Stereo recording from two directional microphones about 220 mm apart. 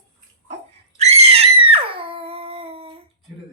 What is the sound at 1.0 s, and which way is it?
Screaming, 30° right (ahead or behind).